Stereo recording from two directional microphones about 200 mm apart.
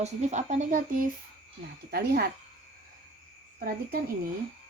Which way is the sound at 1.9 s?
50° right (ahead or behind).